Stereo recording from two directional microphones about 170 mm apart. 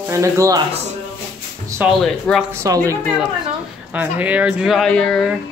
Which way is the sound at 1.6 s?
15° right (ahead or behind).